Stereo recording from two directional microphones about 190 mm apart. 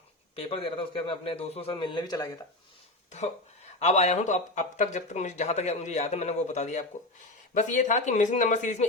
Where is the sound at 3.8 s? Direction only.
35° left (ahead or behind).